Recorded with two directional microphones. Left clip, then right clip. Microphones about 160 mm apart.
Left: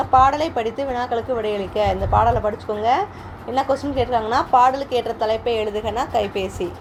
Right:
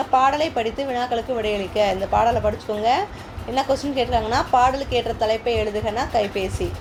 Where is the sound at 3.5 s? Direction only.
25° left (ahead or behind).